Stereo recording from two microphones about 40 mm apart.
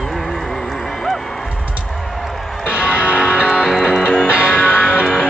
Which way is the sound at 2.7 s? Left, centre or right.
Right.